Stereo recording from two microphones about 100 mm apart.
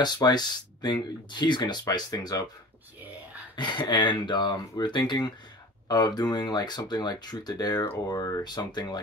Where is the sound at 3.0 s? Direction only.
15° right (ahead or behind).